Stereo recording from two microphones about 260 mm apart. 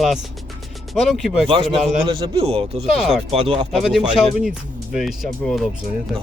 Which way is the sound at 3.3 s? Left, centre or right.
Right.